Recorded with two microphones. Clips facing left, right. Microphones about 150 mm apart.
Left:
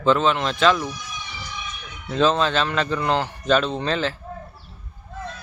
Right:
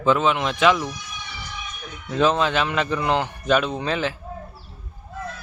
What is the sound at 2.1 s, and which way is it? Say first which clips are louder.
A man's voice: even; 15° right (ahead or behind).